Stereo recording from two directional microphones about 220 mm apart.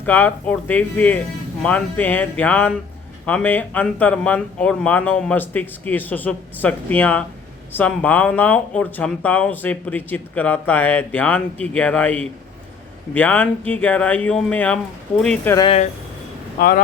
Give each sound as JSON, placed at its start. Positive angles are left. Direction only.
{"t": 0.0, "sound": "speech", "side_deg": 10}
{"t": 15.5, "sound": "speech", "side_deg": 25}
{"t": 16.6, "sound": "speech", "side_deg": 40}